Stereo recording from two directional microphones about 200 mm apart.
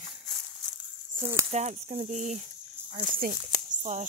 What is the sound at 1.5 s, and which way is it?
Speech, 35° right (ahead or behind).